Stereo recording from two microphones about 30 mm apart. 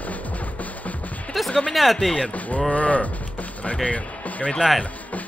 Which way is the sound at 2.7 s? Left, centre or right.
Left.